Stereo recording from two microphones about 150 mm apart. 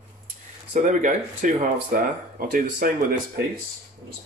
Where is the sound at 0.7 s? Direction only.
55° right (ahead or behind).